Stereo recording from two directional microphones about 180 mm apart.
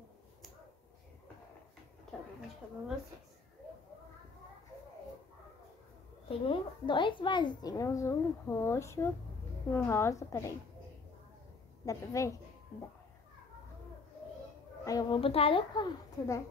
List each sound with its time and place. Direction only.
6.2 s a woman's voice: 30° left (ahead or behind)
11.8 s a woman's voice: 20° left (ahead or behind)
14.9 s a woman's voice: 25° left (ahead or behind)